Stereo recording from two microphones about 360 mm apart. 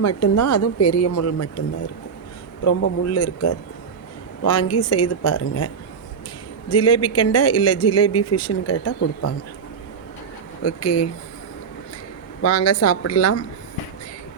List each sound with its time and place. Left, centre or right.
0.0 s speech: left
2.8 s speech: left
10.6 s speech: left
12.4 s speech: left